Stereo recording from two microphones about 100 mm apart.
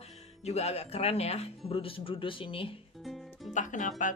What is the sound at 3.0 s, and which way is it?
Music, centre (ahead or behind).